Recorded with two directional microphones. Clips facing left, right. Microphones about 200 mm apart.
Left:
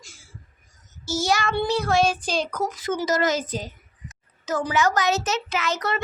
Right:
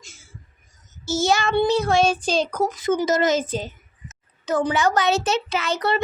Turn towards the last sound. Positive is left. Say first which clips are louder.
# right 3 dB
turn(degrees=-30)  # may be behind; listen again after turning